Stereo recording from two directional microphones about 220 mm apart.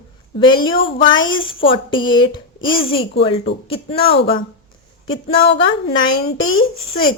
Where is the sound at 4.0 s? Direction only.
45° left (ahead or behind).